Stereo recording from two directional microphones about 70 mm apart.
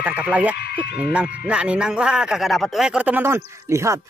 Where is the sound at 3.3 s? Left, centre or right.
Right.